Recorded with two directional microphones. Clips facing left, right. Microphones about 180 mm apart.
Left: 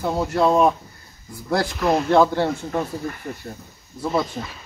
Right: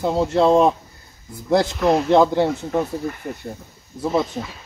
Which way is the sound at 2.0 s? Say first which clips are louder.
Even; 20° right (ahead or behind).